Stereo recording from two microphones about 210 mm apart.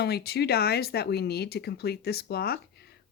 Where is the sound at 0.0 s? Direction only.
50° left (ahead or behind).